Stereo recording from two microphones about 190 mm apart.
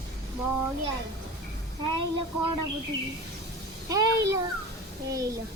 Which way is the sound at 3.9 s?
20° right (ahead or behind).